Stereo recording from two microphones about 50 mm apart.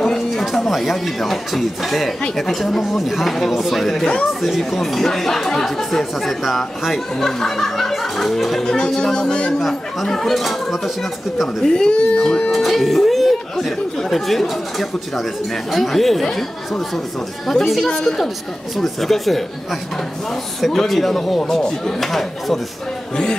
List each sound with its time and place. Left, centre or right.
0.0 s speech: centre
4.0 s speech: left
4.3 s speech: centre
8.6 s speech: centre
9.5 s speech: centre
11.4 s speech: centre
12.4 s speech: centre